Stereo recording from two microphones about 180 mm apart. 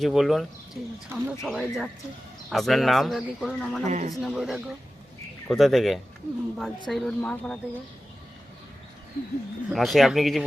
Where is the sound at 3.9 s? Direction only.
45° right (ahead or behind).